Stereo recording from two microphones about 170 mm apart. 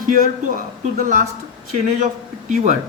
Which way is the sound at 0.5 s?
55° right (ahead or behind).